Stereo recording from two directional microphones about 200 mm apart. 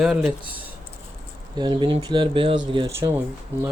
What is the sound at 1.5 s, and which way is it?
Speech, 20° right (ahead or behind).